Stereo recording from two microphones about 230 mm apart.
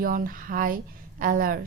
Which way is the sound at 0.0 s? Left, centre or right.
Right.